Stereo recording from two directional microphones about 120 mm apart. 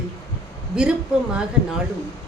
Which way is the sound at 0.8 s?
5° right (ahead or behind).